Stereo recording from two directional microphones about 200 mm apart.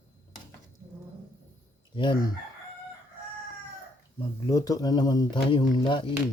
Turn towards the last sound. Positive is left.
turn(degrees=25)  # may be behind; listen again after turning